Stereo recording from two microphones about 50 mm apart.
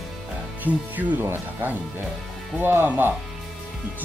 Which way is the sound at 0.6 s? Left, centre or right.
Right.